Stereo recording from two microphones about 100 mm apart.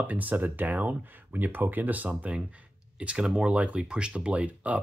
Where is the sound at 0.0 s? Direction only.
15° right (ahead or behind).